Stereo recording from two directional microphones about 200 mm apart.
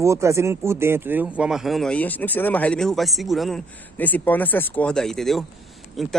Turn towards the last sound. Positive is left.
turn(degrees=0)  # may be behind; listen again after turning